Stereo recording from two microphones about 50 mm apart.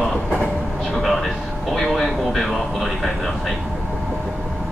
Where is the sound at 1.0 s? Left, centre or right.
Centre.